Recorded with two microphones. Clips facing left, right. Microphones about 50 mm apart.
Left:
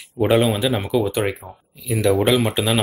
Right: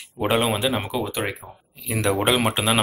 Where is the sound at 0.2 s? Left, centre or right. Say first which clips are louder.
Left 4 dB; centre.